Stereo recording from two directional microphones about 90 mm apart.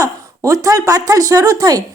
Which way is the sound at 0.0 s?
40° right (ahead or behind).